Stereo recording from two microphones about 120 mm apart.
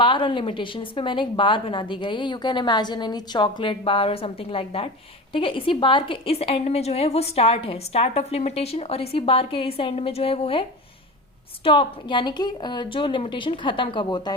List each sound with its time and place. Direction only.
0.0 s a woman's voice: 45° left (ahead or behind)